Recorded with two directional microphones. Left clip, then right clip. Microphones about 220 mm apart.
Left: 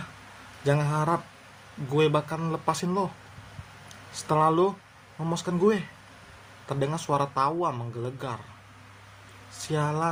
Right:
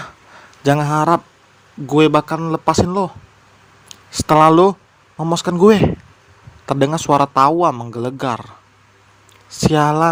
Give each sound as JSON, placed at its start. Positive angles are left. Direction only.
{"t": 0.6, "sound": "speech", "side_deg": -40}
{"t": 9.5, "sound": "speech", "side_deg": -40}